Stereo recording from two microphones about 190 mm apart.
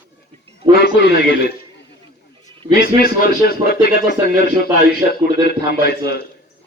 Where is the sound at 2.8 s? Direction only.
50° left (ahead or behind).